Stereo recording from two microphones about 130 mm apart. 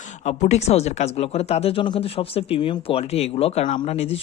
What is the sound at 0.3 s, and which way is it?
Speech, 60° left (ahead or behind).